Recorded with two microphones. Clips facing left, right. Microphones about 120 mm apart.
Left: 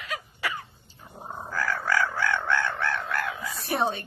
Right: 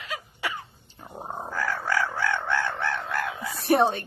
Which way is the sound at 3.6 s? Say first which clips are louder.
Right 7 dB; 65° right (ahead or behind).